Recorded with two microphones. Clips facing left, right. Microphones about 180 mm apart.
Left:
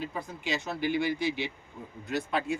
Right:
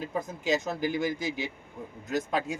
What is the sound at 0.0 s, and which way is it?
A man's voice, 45° right (ahead or behind).